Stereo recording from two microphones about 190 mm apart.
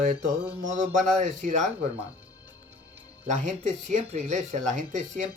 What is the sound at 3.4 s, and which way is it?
Speech, 40° right (ahead or behind).